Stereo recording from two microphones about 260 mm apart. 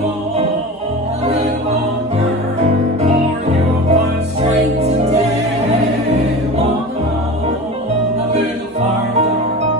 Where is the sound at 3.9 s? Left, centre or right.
Right.